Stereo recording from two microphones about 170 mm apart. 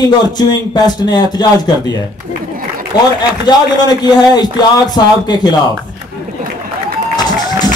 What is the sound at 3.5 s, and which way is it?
A man's voice, 25° left (ahead or behind).